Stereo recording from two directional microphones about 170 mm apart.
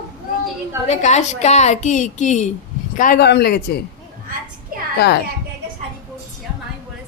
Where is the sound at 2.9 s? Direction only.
55° left (ahead or behind).